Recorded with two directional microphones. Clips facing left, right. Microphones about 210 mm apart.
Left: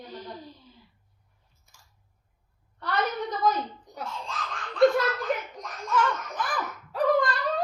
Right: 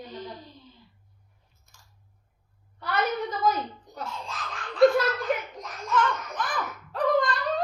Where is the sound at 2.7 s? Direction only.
5° right (ahead or behind).